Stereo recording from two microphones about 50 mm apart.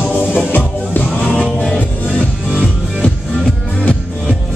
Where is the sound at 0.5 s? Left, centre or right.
Left.